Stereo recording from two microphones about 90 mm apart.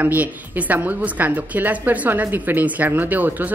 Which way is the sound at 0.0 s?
15° right (ahead or behind).